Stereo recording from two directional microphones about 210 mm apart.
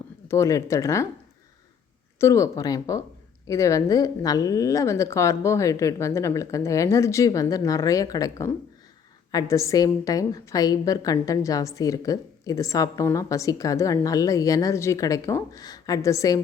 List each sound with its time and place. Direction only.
0.3 s a woman's voice: 15° left (ahead or behind)
2.1 s a woman's voice: 15° left (ahead or behind)